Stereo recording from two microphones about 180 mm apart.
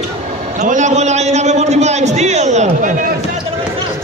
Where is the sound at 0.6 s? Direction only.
40° right (ahead or behind).